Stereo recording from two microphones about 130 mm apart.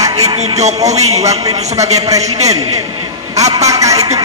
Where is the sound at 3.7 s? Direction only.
25° right (ahead or behind).